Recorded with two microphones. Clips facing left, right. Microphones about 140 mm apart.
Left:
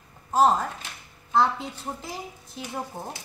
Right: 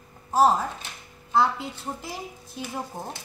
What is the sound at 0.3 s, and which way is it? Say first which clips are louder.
A woman's voice: even; 5° right (ahead or behind).